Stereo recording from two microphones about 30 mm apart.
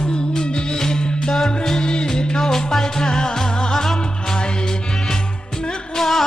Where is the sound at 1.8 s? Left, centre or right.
Left.